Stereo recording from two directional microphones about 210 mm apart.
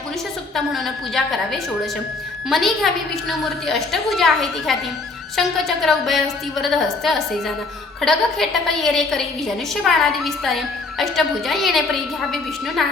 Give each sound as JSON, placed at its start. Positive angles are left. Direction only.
{"t": 0.5, "sound": "a woman's voice", "side_deg": 0}
{"t": 2.5, "sound": "a woman's voice", "side_deg": 0}